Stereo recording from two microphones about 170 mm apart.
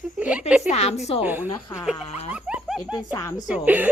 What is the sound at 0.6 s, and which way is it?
Speech, 40° left (ahead or behind).